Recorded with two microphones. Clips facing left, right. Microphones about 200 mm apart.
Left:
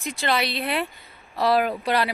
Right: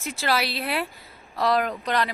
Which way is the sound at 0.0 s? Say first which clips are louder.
Left 1 dB; 5° right (ahead or behind).